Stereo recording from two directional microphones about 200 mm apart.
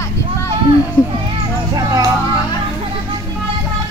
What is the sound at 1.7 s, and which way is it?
Music, 20° right (ahead or behind).